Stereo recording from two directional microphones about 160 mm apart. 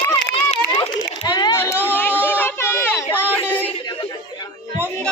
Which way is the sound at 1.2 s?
25° left (ahead or behind).